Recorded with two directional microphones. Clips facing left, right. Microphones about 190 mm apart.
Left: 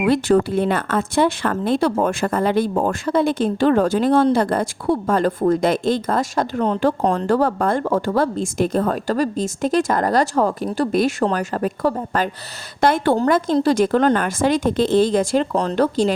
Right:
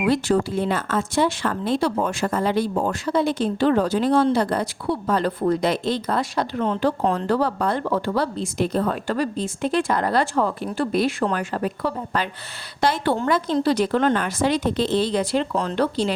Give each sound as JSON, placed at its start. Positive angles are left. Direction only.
{"t": 0.0, "sound": "speech", "side_deg": 55}